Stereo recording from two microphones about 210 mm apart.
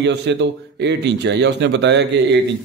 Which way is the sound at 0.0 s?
55° right (ahead or behind).